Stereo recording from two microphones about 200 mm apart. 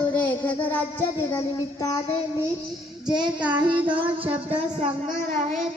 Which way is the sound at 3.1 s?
20° right (ahead or behind).